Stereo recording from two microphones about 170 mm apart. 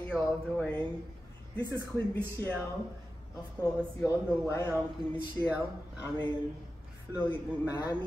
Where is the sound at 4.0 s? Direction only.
15° left (ahead or behind).